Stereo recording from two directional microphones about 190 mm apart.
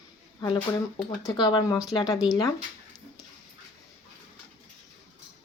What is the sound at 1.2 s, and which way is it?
Speech, 25° left (ahead or behind).